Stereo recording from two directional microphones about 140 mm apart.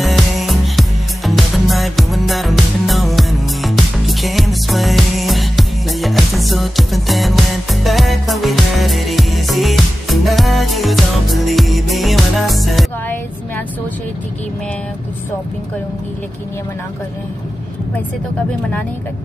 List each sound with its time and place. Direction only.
0.0 s music: centre (ahead or behind)